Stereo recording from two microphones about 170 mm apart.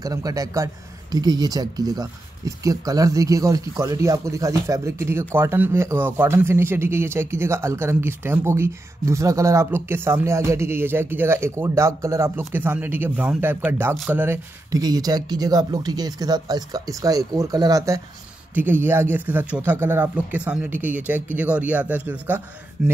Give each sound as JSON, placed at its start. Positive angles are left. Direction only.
{"t": 0.0, "sound": "speech", "side_deg": -20}
{"t": 14.2, "sound": "speech", "side_deg": -15}